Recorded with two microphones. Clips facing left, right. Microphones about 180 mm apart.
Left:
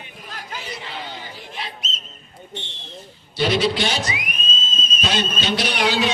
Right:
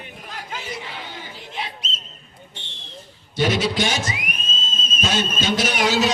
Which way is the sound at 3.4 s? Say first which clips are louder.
Left 1 dB; 45° right (ahead or behind).